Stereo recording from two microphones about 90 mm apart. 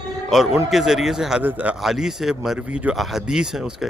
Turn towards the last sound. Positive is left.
turn(degrees=-5)  # may be behind; listen again after turning